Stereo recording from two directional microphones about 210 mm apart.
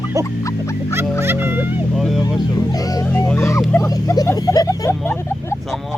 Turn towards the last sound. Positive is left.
turn(degrees=10)  # may be behind; listen again after turning